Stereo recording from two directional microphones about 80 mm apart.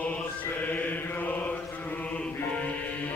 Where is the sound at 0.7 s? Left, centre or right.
Left.